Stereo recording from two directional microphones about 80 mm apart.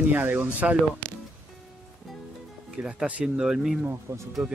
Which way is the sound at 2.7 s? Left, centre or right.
Centre.